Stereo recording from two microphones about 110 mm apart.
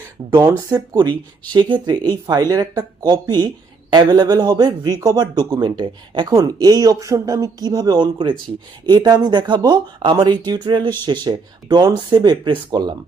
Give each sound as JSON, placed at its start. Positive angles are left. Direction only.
{"t": 0.2, "sound": "speech", "side_deg": -40}